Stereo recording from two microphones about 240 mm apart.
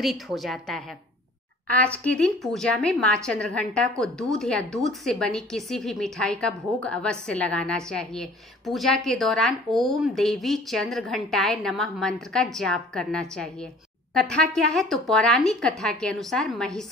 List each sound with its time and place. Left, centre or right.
0.0 s a woman's voice: centre